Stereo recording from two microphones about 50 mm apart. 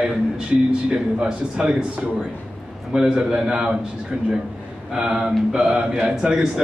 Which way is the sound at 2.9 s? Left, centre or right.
Centre.